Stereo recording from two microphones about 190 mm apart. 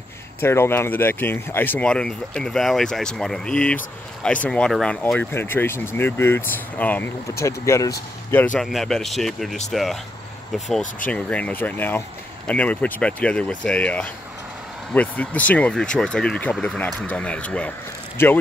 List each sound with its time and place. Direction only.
0.4 s speech: 10° left (ahead or behind)
8.5 s speech: centre (ahead or behind)
11.1 s speech: 5° left (ahead or behind)